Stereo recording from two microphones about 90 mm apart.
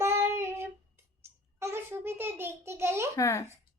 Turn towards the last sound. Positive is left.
turn(degrees=35)  # may be behind; listen again after turning